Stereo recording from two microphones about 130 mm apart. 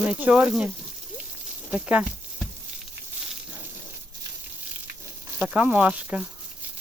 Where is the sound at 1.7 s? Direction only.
10° right (ahead or behind).